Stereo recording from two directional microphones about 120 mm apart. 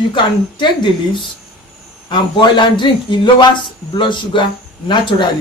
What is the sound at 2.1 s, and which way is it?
Speech, 40° left (ahead or behind).